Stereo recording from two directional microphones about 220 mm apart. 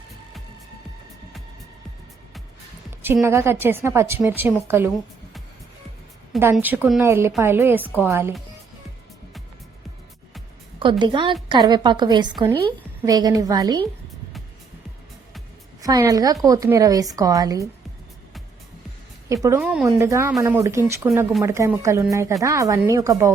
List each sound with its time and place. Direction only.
3.0 s a woman's voice: 10° right (ahead or behind)
6.4 s a woman's voice: 10° right (ahead or behind)
10.8 s a woman's voice: 20° right (ahead or behind)
15.8 s a woman's voice: 15° right (ahead or behind)
19.3 s a woman's voice: 15° right (ahead or behind)